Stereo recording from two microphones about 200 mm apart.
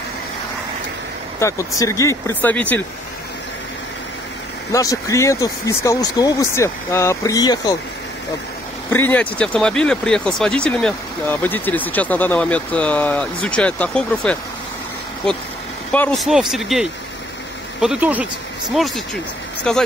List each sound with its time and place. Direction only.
1.4 s speech: 15° left (ahead or behind)
4.7 s speech: 15° left (ahead or behind)
8.9 s speech: 10° left (ahead or behind); by 18.3 s 5° right (ahead or behind)
19.7 s speech: 5° left (ahead or behind)